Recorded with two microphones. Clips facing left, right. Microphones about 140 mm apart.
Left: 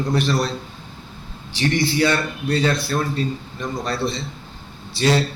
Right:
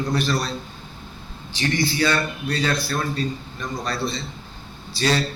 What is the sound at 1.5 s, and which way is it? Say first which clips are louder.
A man's voice: left 3 dB; 30° left (ahead or behind).